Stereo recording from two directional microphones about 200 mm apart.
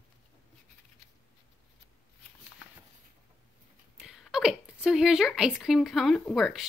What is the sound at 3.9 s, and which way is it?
Speech, 5° right (ahead or behind).